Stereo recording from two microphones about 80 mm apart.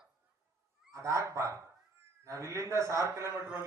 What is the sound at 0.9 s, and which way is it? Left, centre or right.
A man's voice, right.